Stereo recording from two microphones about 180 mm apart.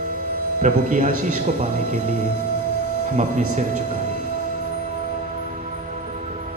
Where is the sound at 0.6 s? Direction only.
45° right (ahead or behind).